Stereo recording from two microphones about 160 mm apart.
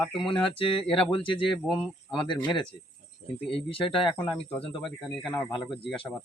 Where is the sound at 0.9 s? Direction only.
5° left (ahead or behind).